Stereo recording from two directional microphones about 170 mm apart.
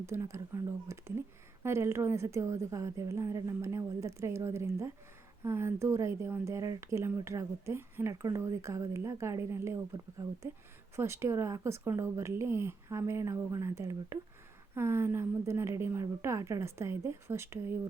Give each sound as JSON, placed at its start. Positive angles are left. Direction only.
{"t": 0.0, "sound": "speech", "side_deg": -15}
{"t": 10.9, "sound": "speech", "side_deg": -15}